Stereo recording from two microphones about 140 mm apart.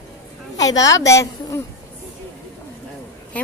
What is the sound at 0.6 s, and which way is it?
A woman's voice, 25° left (ahead or behind).